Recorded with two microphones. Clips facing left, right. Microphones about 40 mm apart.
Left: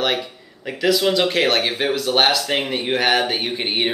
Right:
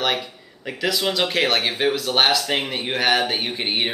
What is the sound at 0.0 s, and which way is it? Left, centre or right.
Speech, centre.